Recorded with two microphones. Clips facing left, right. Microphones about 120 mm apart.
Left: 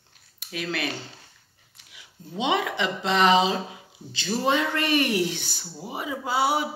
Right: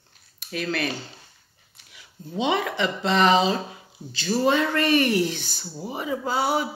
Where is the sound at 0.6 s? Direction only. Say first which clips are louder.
Right 3 dB; 15° left (ahead or behind).